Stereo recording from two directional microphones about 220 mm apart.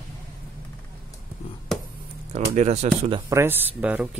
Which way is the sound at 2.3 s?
30° right (ahead or behind).